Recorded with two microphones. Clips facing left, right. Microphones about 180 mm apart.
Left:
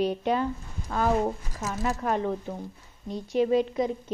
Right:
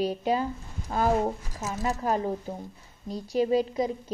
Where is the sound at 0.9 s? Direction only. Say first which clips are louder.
Right 1 dB; 25° right (ahead or behind).